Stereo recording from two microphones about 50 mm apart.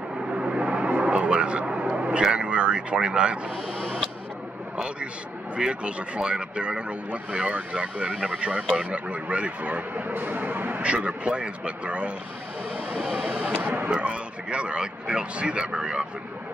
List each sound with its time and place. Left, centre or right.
0.3 s vehicle: centre
1.0 s a sound: right
3.7 s a sound: centre
5.6 s a man's voice: right
10.8 s a man's voice: right
13.2 s vehicle: right
13.9 s a man's voice: right